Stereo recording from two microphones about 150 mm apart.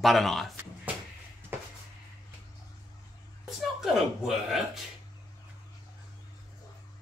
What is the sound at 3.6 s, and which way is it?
Speech, centre (ahead or behind).